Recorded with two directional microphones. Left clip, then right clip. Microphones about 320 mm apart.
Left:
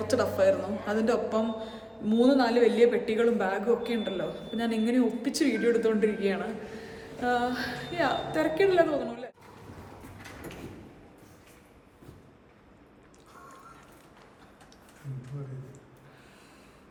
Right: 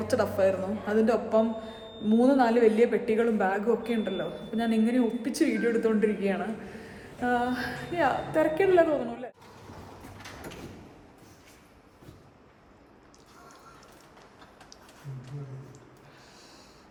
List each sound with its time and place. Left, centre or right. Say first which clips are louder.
0.1 s a man's voice: left 1 dB; centre